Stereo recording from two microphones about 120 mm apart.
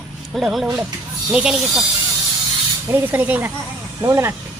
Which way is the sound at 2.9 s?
15° right (ahead or behind).